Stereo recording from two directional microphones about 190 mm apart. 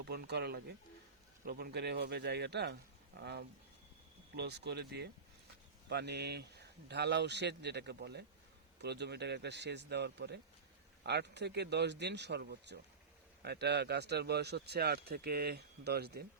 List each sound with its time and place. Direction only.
0.0 s speech: 60° right (ahead or behind)